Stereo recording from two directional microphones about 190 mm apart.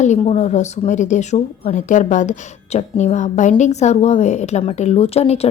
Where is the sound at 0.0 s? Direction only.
35° left (ahead or behind).